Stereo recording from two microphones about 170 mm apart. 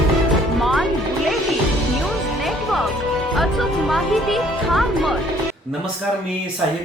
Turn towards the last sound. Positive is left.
turn(degrees=0)  # may be behind; listen again after turning